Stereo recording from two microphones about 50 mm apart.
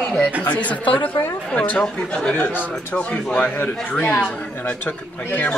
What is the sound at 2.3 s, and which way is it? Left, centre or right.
Speech, left.